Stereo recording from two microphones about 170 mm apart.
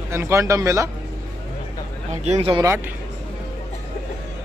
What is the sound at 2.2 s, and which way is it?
Speech, 40° right (ahead or behind).